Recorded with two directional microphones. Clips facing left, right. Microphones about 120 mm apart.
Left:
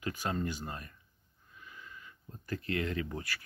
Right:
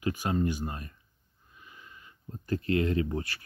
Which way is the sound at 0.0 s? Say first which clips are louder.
Right 6 dB; 15° right (ahead or behind).